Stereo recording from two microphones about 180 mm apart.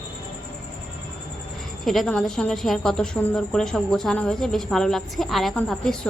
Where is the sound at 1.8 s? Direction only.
Centre (ahead or behind).